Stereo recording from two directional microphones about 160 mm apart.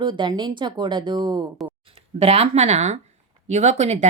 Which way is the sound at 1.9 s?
40° right (ahead or behind).